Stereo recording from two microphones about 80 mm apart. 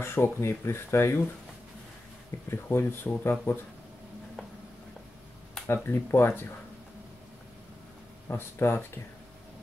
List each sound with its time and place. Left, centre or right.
0.0 s speech: left
2.5 s speech: left
5.9 s speech: left
8.3 s speech: left